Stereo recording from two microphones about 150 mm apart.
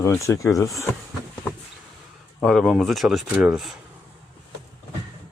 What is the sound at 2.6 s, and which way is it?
Speech, centre (ahead or behind).